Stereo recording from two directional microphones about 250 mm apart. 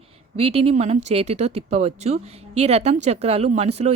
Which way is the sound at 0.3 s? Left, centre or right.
Right.